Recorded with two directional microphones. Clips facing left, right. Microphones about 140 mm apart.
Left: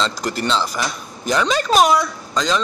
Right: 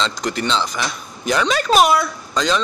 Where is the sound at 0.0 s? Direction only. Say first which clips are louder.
Even; 5° left (ahead or behind).